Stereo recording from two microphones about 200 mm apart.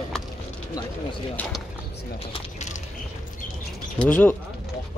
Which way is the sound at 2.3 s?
35° left (ahead or behind).